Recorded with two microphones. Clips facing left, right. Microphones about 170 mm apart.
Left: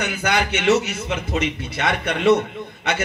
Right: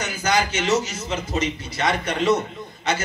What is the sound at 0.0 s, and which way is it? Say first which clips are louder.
A man's voice: left 1 dB; 60° left (ahead or behind).